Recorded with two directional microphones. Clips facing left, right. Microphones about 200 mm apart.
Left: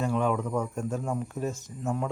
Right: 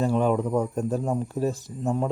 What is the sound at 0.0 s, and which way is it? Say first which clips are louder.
Speech: right 4 dB; 35° right (ahead or behind).